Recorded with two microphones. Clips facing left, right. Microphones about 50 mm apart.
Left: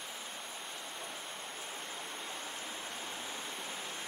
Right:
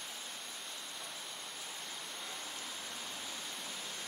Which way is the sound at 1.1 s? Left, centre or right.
Left.